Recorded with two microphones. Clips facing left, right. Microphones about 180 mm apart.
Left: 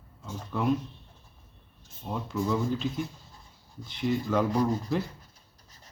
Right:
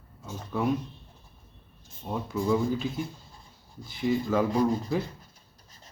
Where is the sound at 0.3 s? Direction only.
5° right (ahead or behind).